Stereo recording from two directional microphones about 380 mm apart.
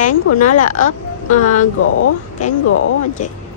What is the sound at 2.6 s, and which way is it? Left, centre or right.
Speech, left.